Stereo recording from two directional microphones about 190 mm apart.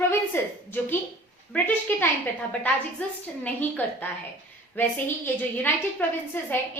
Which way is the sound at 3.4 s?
10° left (ahead or behind).